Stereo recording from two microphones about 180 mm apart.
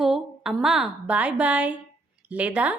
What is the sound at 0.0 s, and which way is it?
A woman's voice, centre (ahead or behind).